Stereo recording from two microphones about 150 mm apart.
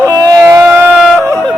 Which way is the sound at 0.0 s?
25° right (ahead or behind).